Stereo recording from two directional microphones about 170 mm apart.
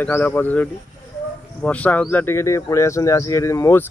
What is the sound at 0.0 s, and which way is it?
Speech, 10° left (ahead or behind).